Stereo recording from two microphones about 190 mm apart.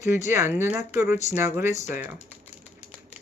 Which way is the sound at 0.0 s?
15° right (ahead or behind).